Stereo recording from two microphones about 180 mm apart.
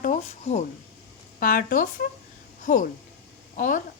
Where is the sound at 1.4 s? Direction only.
50° left (ahead or behind).